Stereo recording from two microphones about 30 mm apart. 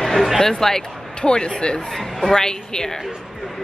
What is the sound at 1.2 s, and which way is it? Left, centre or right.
A woman's voice, left.